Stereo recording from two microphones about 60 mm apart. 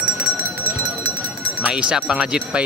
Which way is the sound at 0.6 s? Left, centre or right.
Right.